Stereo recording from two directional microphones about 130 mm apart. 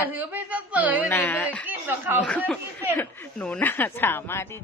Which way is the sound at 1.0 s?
15° left (ahead or behind).